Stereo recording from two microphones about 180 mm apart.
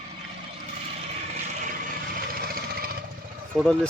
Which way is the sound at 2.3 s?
55° right (ahead or behind).